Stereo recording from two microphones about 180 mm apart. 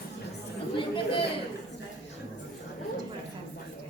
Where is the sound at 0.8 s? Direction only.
30° left (ahead or behind).